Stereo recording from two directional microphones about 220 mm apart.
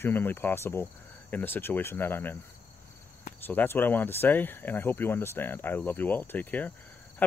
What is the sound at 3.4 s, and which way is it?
Speech, 10° left (ahead or behind).